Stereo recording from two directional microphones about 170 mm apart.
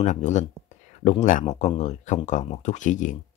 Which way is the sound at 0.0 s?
45° left (ahead or behind).